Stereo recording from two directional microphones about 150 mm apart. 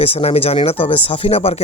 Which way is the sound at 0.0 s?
40° left (ahead or behind).